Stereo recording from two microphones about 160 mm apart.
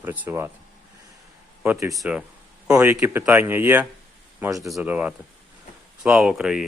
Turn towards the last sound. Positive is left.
turn(degrees=-5)  # may be behind; listen again after turning